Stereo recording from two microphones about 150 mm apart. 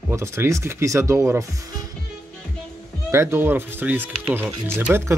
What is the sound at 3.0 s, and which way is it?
Speech, 15° right (ahead or behind).